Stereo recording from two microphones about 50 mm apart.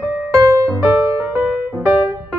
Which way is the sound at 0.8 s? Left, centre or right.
Right.